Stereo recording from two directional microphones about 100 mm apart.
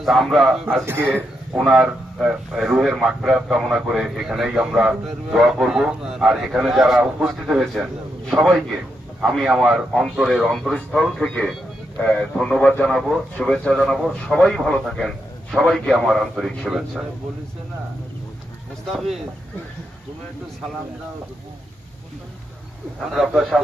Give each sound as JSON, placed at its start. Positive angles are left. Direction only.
{"t": 0.0, "sound": "a man's voice", "side_deg": 0}
{"t": 0.9, "sound": "a man's voice", "side_deg": -20}
{"t": 1.5, "sound": "a man's voice", "side_deg": -10}
{"t": 18.9, "sound": "a man's voice", "side_deg": 0}
{"t": 23.0, "sound": "a man's voice", "side_deg": -5}